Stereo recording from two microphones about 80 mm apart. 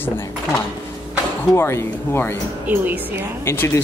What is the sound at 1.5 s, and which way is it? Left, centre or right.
Speech, left.